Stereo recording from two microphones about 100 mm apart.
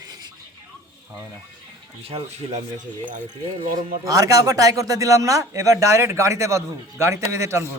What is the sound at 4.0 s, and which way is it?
Speech, 35° right (ahead or behind).